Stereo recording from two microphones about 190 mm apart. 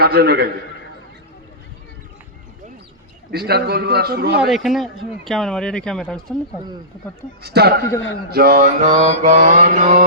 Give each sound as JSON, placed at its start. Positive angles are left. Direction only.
{"t": 0.0, "sound": "a man's voice", "side_deg": -55}
{"t": 3.3, "sound": "a man's voice", "side_deg": -55}
{"t": 4.4, "sound": "speech", "side_deg": 0}
{"t": 7.4, "sound": "a man's voice", "side_deg": -60}
{"t": 8.3, "sound": "mantra", "side_deg": -55}